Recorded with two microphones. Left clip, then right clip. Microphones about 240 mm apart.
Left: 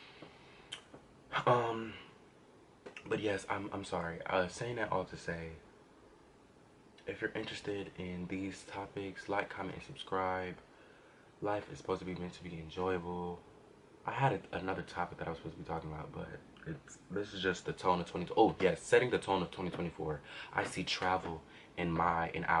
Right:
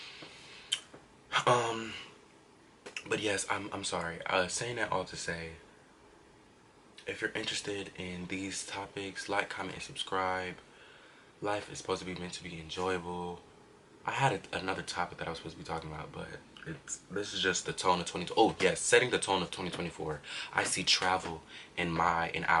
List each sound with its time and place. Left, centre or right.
1.3 s a sound: centre
2.8 s speech: centre
7.0 s speech: centre
13.1 s speech: left
14.0 s speech: centre
20.6 s speech: centre